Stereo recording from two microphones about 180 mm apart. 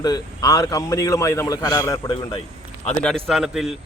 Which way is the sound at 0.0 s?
20° left (ahead or behind).